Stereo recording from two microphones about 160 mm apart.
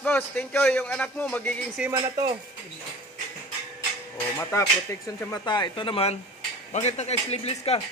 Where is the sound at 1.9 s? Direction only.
25° right (ahead or behind).